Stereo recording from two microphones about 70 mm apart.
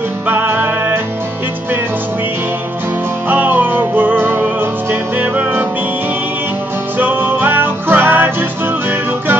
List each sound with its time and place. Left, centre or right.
0.3 s music: right
3.3 s music: right
7.0 s music: right